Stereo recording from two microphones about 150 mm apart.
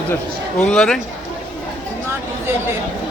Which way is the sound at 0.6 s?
5° left (ahead or behind).